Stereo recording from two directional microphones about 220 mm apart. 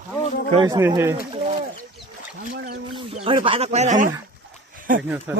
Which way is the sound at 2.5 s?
45° right (ahead or behind).